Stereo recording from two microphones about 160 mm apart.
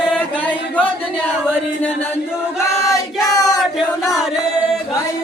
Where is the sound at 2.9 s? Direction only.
20° left (ahead or behind).